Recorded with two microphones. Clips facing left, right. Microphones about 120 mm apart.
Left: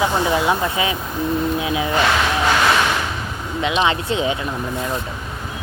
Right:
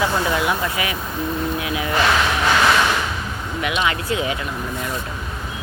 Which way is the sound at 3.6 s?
25° left (ahead or behind).